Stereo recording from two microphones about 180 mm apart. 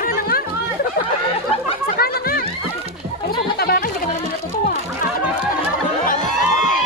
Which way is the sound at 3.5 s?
60° left (ahead or behind).